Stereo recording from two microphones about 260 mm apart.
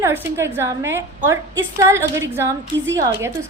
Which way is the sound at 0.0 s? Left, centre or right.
Centre.